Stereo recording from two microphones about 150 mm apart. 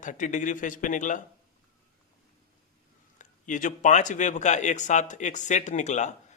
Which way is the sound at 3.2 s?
55° left (ahead or behind).